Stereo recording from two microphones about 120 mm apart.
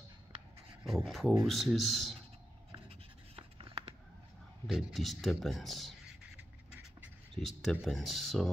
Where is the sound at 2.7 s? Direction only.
55° right (ahead or behind).